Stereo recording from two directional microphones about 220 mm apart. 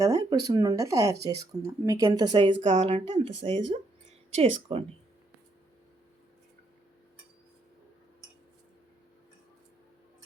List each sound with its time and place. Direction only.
0.0 s speech: 15° right (ahead or behind)
2.6 s speech: 35° right (ahead or behind)